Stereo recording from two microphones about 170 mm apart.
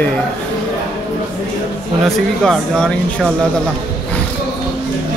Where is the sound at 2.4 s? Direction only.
Centre (ahead or behind).